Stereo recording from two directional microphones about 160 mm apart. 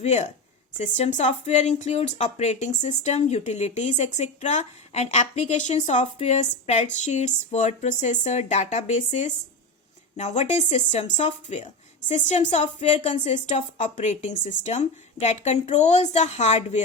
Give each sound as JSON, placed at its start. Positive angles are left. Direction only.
{"t": 0.0, "sound": "speech", "side_deg": 45}